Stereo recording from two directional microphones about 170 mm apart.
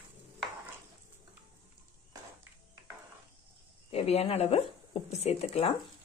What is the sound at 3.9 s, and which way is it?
Speech, 35° left (ahead or behind).